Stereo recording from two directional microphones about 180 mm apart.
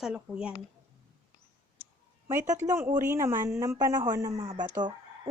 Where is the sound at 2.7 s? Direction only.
15° right (ahead or behind).